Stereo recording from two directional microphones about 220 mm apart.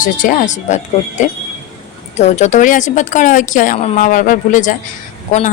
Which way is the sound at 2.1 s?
30° left (ahead or behind).